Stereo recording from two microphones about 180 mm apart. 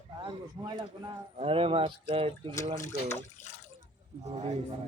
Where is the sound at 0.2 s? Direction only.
25° right (ahead or behind).